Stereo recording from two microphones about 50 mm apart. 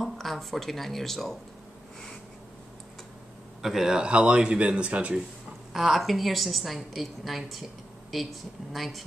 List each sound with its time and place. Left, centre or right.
0.0 s speech: centre
3.6 s speech: centre
5.7 s a woman's voice: centre